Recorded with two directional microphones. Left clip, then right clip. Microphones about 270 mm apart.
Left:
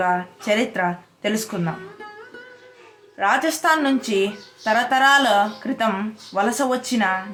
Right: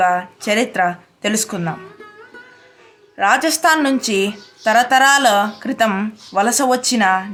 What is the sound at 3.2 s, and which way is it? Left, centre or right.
Speech, right.